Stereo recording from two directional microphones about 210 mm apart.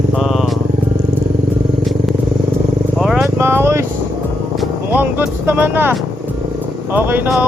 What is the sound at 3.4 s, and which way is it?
Vehicle, 10° right (ahead or behind).